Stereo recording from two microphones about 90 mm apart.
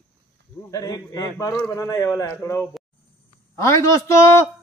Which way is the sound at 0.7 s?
40° left (ahead or behind).